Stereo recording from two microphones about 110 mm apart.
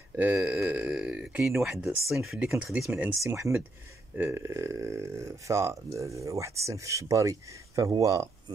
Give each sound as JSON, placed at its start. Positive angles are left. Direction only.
{"t": 0.1, "sound": "speech", "side_deg": -15}
{"t": 0.7, "sound": "a sound", "side_deg": -10}
{"t": 1.7, "sound": "speech", "side_deg": -5}
{"t": 3.2, "sound": "speech", "side_deg": -30}